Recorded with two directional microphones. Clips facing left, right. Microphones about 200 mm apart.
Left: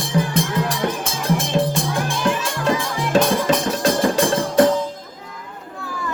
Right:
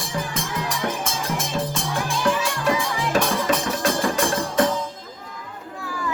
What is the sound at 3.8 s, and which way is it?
Music, 35° left (ahead or behind).